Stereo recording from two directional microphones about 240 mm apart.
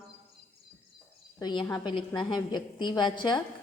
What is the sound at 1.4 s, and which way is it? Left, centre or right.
A woman's voice, centre.